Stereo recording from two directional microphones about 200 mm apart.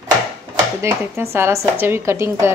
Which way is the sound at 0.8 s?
10° right (ahead or behind).